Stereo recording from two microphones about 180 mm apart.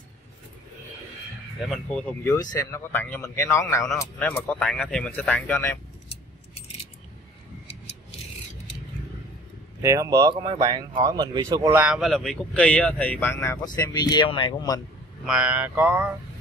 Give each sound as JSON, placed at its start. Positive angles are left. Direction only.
{"t": 1.7, "sound": "speech", "side_deg": 5}
{"t": 9.8, "sound": "speech", "side_deg": -15}
{"t": 11.8, "sound": "speech", "side_deg": 0}
{"t": 15.2, "sound": "speech", "side_deg": -5}